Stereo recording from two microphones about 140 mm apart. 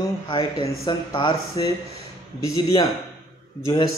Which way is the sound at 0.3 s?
35° left (ahead or behind).